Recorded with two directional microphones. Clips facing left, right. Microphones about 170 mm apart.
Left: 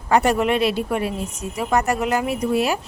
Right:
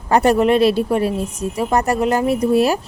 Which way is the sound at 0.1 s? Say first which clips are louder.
Right 4 dB; 35° right (ahead or behind).